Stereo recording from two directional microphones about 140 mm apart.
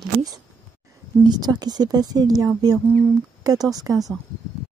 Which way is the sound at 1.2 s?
30° right (ahead or behind).